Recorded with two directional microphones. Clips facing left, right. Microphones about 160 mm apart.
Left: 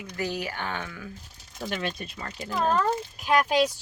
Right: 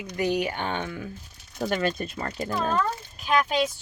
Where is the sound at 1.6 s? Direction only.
40° right (ahead or behind).